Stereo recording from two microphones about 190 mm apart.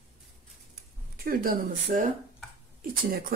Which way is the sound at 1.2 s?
50° right (ahead or behind).